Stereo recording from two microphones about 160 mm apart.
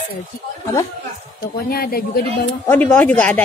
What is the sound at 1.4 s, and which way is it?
Speech, 70° left (ahead or behind).